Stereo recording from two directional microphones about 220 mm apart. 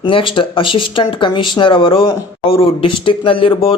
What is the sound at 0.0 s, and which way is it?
Speech, 25° left (ahead or behind).